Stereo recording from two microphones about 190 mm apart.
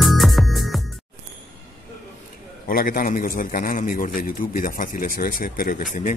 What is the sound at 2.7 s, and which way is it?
A man's voice, 45° left (ahead or behind).